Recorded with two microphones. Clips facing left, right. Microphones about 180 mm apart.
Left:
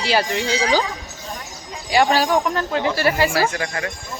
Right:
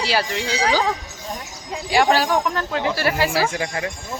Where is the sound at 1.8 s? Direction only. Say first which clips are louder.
Left 1 dB; centre (ahead or behind).